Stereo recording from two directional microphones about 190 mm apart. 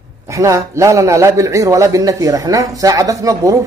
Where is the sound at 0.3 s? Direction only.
15° right (ahead or behind).